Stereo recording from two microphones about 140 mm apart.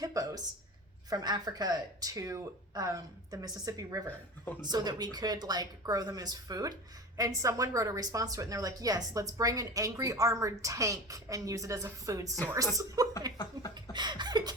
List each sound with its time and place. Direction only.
0.0 s a woman's voice: 25° right (ahead or behind)
13.3 s speech: 30° left (ahead or behind)
13.9 s a sound: 30° right (ahead or behind)